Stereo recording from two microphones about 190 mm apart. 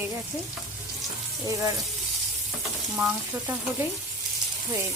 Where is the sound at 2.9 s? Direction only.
Centre (ahead or behind).